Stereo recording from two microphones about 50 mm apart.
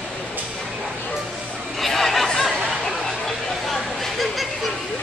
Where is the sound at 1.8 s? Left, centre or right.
Centre.